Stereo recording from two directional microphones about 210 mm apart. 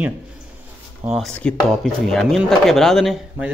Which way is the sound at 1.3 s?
5° left (ahead or behind).